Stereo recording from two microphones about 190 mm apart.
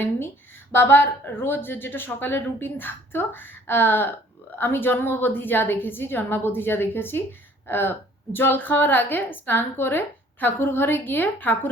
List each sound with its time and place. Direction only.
0.7 s speech: 10° left (ahead or behind)